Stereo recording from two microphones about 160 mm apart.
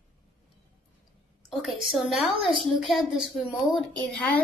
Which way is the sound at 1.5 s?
Centre (ahead or behind).